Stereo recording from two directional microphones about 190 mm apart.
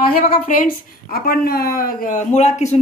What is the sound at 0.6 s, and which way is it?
A woman's voice, 45° left (ahead or behind).